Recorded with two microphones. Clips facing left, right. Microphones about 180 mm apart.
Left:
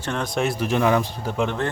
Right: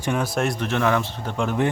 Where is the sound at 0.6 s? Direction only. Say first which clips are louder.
Left 2 dB; 15° left (ahead or behind).